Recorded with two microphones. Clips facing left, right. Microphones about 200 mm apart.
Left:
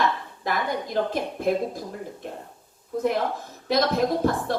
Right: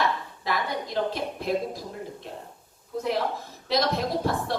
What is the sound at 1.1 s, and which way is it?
Speech, 50° left (ahead or behind).